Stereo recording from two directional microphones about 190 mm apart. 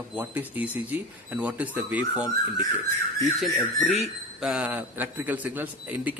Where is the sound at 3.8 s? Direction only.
Centre (ahead or behind).